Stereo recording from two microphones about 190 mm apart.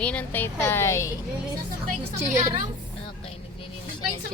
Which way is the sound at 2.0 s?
35° right (ahead or behind).